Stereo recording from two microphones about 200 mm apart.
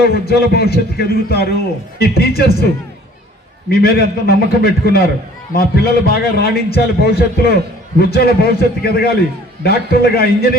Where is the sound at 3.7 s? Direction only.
50° left (ahead or behind).